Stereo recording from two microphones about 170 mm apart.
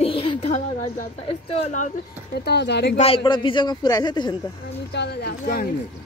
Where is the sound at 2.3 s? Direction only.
75° left (ahead or behind).